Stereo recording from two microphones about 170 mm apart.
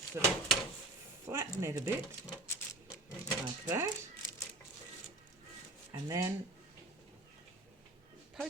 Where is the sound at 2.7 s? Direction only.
20° left (ahead or behind).